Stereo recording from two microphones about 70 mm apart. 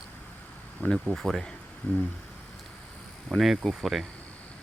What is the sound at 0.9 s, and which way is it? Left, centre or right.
Speech, centre.